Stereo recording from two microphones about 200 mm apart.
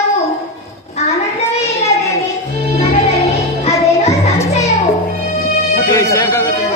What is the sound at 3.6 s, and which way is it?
Music, 30° left (ahead or behind).